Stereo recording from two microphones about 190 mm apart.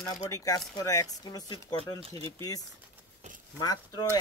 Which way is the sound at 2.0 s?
30° right (ahead or behind).